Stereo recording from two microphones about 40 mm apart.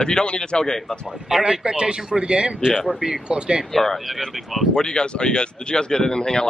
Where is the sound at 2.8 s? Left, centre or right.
Centre.